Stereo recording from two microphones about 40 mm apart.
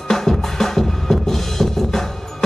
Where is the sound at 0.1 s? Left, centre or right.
Centre.